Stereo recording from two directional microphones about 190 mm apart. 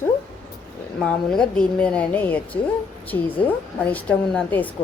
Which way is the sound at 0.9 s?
5° left (ahead or behind).